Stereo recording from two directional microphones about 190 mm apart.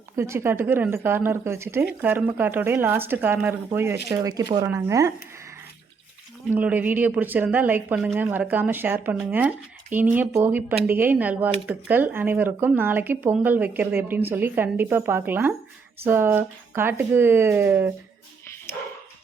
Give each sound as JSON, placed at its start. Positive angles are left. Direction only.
{"t": 0.2, "sound": "speech", "side_deg": -15}
{"t": 18.7, "sound": "dog", "side_deg": 15}